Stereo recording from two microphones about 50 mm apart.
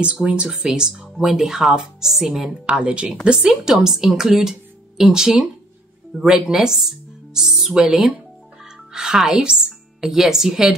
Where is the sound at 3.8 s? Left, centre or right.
Centre.